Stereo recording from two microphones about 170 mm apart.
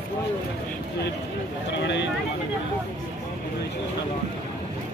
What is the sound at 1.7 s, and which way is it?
Speech, 90° left.